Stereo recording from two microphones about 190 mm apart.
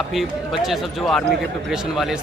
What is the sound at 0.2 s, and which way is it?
A man's voice, centre (ahead or behind).